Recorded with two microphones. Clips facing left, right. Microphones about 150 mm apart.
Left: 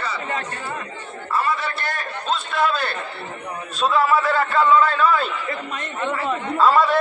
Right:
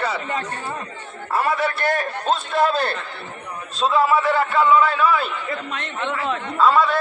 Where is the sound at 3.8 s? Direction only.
20° right (ahead or behind).